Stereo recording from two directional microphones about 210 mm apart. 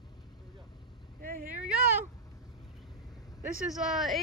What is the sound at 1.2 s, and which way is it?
Vehicle, 40° right (ahead or behind).